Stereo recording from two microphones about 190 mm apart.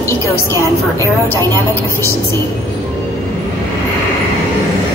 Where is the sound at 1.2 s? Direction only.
15° left (ahead or behind).